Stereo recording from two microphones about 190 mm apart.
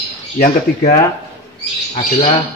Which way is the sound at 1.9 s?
30° left (ahead or behind).